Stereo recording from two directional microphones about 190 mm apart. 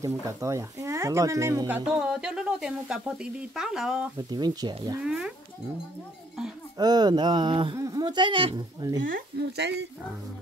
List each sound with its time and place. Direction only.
0.0 s speech: 15° right (ahead or behind)
1.9 s sizzle: 5° right (ahead or behind)
4.3 s speech: 20° right (ahead or behind)
5.0 s sizzle: 5° right (ahead or behind)
6.8 s speech: 20° right (ahead or behind)
9.0 s speech: 55° right (ahead or behind)